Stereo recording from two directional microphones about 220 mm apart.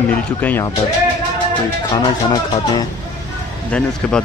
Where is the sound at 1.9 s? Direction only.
20° left (ahead or behind).